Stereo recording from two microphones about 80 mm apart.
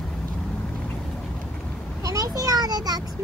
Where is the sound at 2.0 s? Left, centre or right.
Right.